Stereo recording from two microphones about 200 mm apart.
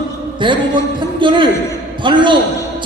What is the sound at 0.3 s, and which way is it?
A man's voice, 25° right (ahead or behind).